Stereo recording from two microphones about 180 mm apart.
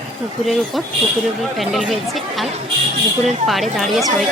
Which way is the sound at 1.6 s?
Centre (ahead or behind).